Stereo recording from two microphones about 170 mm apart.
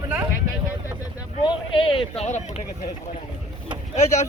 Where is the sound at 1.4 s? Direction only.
30° left (ahead or behind).